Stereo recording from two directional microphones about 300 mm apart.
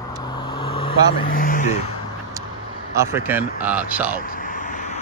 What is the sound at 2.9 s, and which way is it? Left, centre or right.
Speech, centre.